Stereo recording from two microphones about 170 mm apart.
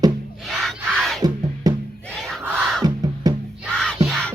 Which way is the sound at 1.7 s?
25° right (ahead or behind).